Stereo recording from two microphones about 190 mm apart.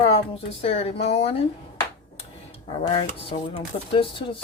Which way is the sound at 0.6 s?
30° left (ahead or behind).